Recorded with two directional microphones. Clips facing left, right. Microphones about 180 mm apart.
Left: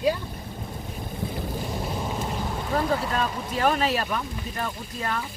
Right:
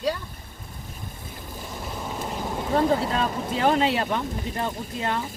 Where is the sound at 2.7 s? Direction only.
30° right (ahead or behind).